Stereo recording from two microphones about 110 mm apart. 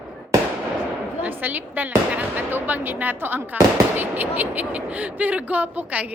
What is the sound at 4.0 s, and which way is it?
Speech, 15° right (ahead or behind).